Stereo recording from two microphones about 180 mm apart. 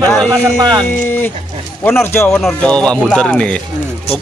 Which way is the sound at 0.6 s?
25° right (ahead or behind).